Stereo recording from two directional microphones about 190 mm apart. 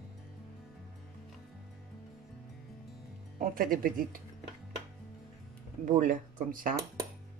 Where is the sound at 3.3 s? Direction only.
45° right (ahead or behind).